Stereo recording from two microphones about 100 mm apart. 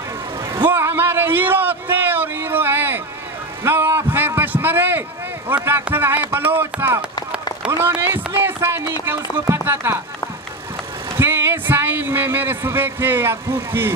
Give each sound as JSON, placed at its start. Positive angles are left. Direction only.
{"t": 0.7, "sound": "a sound", "side_deg": -25}
{"t": 5.5, "sound": "speech", "side_deg": -20}
{"t": 11.1, "sound": "speech", "side_deg": -25}